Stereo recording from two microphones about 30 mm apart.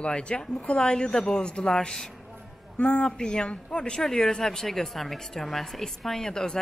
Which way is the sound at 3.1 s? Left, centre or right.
Left.